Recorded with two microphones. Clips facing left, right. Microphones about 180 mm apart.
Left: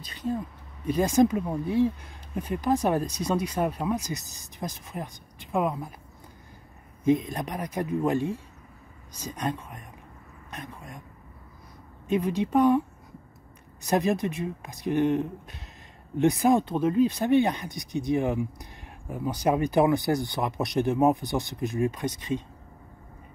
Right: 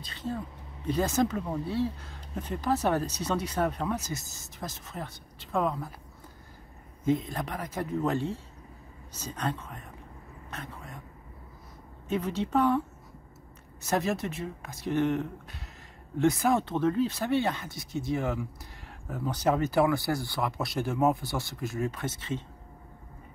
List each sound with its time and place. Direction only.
0.1 s speech: 15° left (ahead or behind)
7.1 s speech: 15° left (ahead or behind)
12.1 s speech: 15° left (ahead or behind)
13.8 s speech: 15° left (ahead or behind)